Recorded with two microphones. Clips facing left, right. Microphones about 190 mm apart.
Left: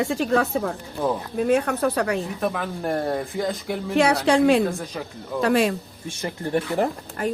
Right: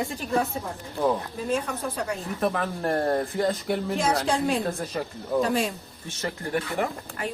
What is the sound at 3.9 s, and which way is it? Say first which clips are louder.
Speech: left 10 dB; 70° left (ahead or behind).